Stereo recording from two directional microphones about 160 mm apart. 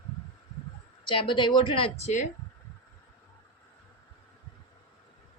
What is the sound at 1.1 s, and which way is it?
A woman's voice, 30° left (ahead or behind).